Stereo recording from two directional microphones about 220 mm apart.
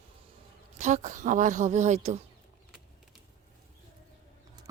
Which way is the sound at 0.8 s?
35° right (ahead or behind).